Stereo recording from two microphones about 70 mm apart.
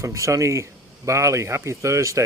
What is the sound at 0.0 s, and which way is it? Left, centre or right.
Speech, right.